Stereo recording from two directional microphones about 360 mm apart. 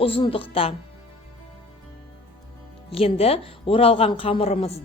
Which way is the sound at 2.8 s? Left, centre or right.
Centre.